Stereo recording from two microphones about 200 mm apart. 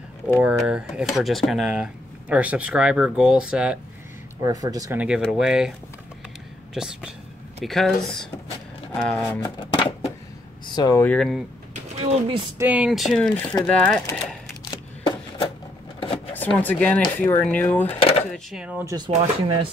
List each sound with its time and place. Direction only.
0.4 s speech: 5° right (ahead or behind)
4.4 s speech: 20° right (ahead or behind)
5.2 s speech: 5° right (ahead or behind)
6.7 s speech: 5° right (ahead or behind)
9.6 s music: 25° left (ahead or behind)
10.7 s speech: 20° left (ahead or behind); by 11.4 s centre (ahead or behind)
11.7 s pigeon: 30° right (ahead or behind)
12.5 s speech: 10° right (ahead or behind)
16.3 s speech: 10° left (ahead or behind)
18.3 s speech: 5° right (ahead or behind)
18.9 s speech: 25° right (ahead or behind)